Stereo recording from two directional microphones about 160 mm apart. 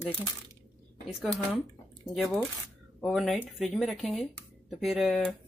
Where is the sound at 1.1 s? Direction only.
Centre (ahead or behind).